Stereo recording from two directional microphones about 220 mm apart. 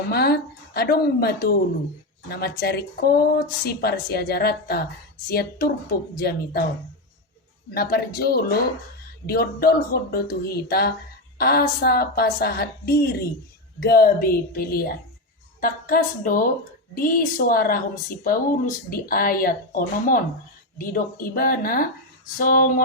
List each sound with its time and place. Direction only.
0.1 s speech: 45° left (ahead or behind)
7.7 s speech: 45° left (ahead or behind)
18.9 s speech: 40° left (ahead or behind)